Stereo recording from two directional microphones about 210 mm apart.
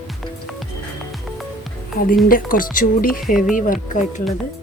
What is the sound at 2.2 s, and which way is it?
Speech, 40° left (ahead or behind).